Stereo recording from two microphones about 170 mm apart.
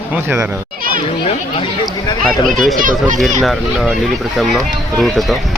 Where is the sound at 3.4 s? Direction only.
Centre (ahead or behind).